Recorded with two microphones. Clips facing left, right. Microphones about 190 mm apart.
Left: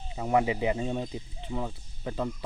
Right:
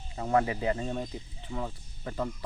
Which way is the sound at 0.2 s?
15° left (ahead or behind).